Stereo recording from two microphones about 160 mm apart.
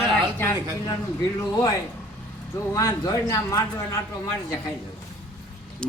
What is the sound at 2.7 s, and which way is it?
A man's voice, 20° left (ahead or behind).